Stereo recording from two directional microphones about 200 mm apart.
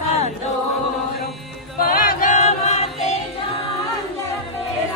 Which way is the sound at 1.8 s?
45° left (ahead or behind).